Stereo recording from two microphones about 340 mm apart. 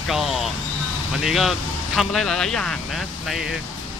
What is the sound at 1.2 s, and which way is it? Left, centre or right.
Speech, centre.